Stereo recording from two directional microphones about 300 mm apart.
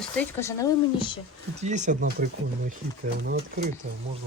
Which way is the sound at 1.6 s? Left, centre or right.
Right.